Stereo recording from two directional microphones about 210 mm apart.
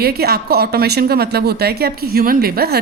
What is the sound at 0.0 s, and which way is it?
A woman's voice, 50° right (ahead or behind).